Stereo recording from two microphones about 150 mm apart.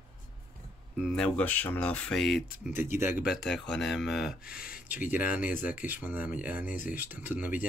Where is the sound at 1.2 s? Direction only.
10° left (ahead or behind).